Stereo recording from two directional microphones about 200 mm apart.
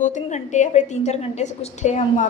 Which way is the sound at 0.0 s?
35° left (ahead or behind).